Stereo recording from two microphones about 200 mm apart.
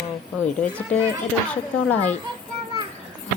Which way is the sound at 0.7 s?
5° left (ahead or behind).